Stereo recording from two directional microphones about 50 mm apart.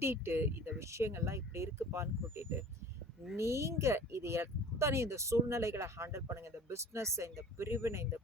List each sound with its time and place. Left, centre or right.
0.0 s speech: right
3.3 s speech: right